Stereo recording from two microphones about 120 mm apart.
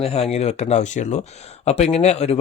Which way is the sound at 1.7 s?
60° left (ahead or behind).